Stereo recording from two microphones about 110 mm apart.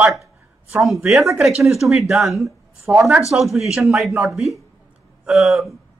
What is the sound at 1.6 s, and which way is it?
A woman's voice, centre (ahead or behind).